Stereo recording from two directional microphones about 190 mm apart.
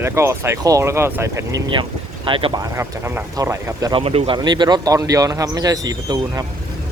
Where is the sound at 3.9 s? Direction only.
30° right (ahead or behind).